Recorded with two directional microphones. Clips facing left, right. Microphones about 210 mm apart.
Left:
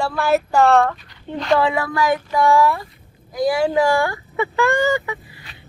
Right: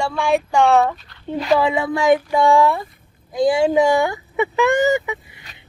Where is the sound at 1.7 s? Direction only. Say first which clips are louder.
Right 4 dB; 25° right (ahead or behind).